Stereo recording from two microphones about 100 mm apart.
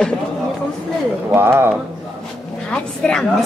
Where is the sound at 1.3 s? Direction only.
25° right (ahead or behind).